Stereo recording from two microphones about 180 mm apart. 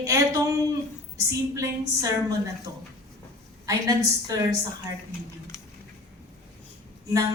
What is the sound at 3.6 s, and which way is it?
Speech, 20° right (ahead or behind).